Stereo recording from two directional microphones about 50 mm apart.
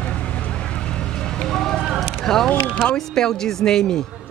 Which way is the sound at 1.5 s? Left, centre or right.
Centre.